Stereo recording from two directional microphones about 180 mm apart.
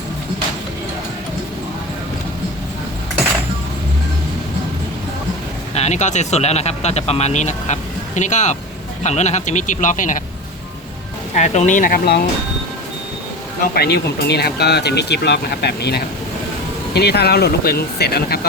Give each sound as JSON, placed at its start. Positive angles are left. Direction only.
{"t": 5.7, "sound": "speech", "side_deg": 40}
{"t": 11.3, "sound": "speech", "side_deg": 40}
{"t": 13.6, "sound": "speech", "side_deg": 60}